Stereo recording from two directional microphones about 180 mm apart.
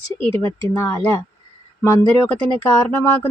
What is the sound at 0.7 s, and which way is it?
Speech, 15° left (ahead or behind).